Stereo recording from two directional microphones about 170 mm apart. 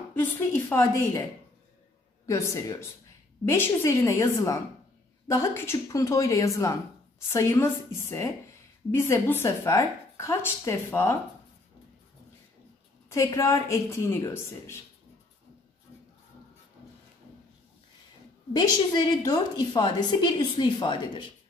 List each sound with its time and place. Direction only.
0.1 s speech: 10° left (ahead or behind)
2.2 s speech: 15° left (ahead or behind)
13.1 s speech: 20° left (ahead or behind)
18.5 s a woman's voice: 20° left (ahead or behind)